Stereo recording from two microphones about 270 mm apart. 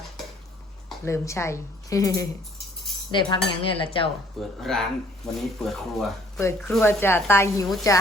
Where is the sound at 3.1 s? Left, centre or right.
Centre.